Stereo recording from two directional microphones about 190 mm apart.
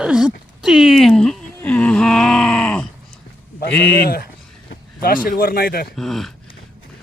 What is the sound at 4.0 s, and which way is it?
Speech, 55° left (ahead or behind).